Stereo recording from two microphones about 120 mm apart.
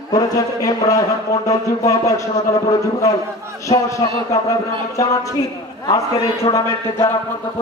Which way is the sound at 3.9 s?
30° left (ahead or behind).